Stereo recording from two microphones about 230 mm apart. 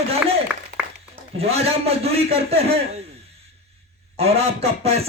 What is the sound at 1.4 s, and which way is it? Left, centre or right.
A man's voice, right.